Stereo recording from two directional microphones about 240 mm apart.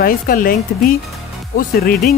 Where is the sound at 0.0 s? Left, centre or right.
Left.